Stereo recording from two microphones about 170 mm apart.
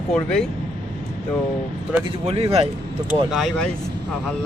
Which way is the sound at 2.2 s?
35° right (ahead or behind).